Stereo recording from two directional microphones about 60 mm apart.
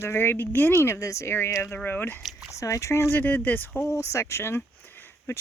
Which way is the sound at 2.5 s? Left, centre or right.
Left.